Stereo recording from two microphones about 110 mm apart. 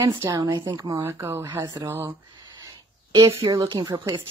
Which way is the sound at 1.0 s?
25° right (ahead or behind).